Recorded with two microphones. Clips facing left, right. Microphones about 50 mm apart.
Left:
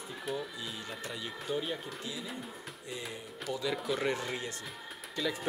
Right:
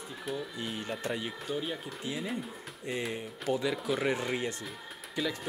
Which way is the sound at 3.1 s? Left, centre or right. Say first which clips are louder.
Right 5 dB; right.